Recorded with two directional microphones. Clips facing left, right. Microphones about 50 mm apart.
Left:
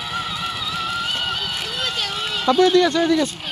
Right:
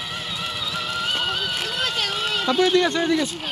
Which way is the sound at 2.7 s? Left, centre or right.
Right.